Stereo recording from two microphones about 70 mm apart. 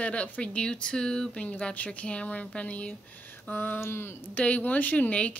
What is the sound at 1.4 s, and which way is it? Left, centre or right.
Speech, left.